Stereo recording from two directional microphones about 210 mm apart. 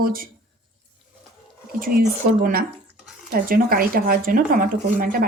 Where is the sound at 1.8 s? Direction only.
45° right (ahead or behind).